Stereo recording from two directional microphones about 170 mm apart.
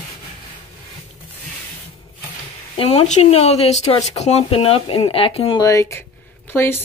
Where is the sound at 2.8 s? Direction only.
35° left (ahead or behind).